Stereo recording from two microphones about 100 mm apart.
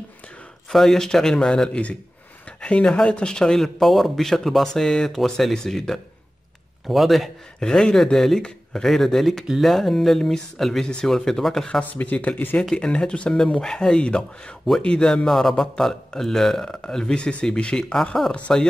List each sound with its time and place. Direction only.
0.7 s speech: 5° left (ahead or behind)
11.8 s speech: 15° left (ahead or behind)